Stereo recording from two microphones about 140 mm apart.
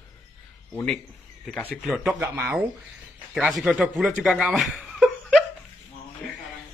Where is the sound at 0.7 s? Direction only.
5° left (ahead or behind).